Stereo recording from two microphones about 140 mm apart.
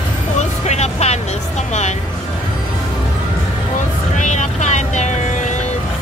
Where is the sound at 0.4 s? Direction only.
55° left (ahead or behind).